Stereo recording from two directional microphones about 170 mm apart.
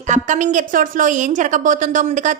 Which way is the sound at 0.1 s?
45° right (ahead or behind).